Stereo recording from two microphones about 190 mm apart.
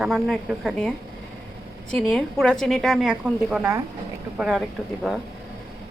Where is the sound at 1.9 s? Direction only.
5° left (ahead or behind).